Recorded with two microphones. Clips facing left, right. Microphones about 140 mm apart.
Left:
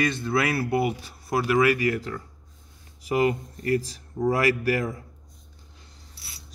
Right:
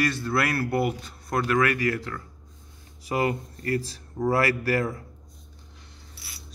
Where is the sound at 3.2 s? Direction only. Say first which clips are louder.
Left 3 dB; 15° left (ahead or behind).